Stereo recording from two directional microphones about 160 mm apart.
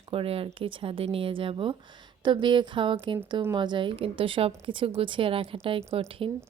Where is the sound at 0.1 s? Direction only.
35° right (ahead or behind).